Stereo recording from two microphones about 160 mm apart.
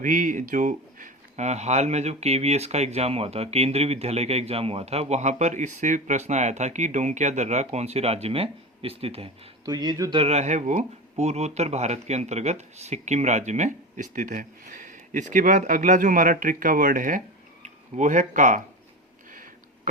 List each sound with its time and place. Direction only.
0.0 s speech: 55° right (ahead or behind); by 9.3 s 35° right (ahead or behind)
9.6 s speech: 25° right (ahead or behind)
10.2 s speech: 45° right (ahead or behind)
19.3 s a sound: 55° right (ahead or behind)